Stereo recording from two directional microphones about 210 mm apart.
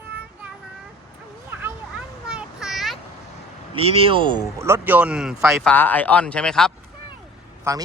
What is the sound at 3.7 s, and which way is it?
Speech, 25° right (ahead or behind).